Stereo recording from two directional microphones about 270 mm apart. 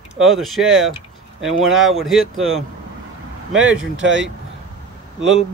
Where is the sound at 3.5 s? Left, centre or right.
Right.